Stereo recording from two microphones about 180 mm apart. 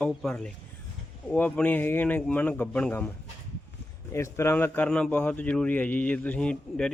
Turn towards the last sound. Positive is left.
turn(degrees=5)  # may be behind; listen again after turning